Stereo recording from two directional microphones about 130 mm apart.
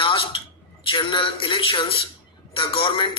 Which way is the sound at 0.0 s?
40° left (ahead or behind).